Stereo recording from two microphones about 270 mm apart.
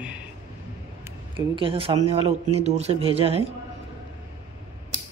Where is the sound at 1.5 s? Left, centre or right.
Centre.